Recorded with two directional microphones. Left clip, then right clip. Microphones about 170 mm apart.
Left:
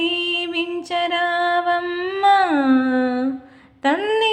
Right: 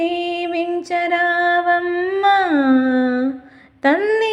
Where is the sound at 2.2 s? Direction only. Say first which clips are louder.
Even; 20° right (ahead or behind).